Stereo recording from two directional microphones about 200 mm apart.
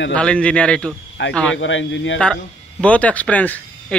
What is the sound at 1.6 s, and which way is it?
Speech, 70° left (ahead or behind).